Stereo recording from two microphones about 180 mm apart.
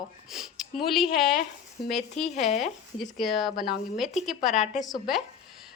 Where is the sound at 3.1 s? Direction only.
Centre (ahead or behind).